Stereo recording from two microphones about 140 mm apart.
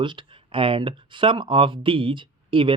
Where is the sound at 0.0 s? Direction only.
35° right (ahead or behind).